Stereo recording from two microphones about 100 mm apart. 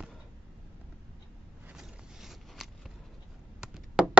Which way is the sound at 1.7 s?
5° right (ahead or behind).